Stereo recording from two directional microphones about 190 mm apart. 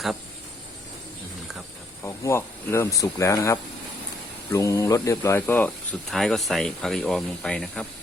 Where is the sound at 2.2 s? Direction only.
15° left (ahead or behind).